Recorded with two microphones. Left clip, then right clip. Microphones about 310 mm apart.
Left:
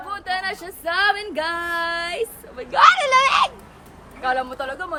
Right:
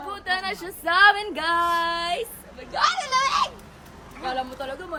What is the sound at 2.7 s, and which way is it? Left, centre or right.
Speech, left.